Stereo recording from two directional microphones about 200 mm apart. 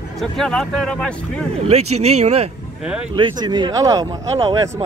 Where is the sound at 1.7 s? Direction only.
30° right (ahead or behind).